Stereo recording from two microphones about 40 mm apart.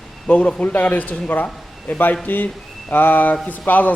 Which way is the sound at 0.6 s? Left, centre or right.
Left.